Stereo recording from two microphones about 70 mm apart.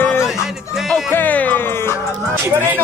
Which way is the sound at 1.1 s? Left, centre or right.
Left.